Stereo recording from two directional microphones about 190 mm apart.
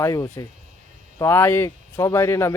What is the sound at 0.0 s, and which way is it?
Speech, 15° left (ahead or behind).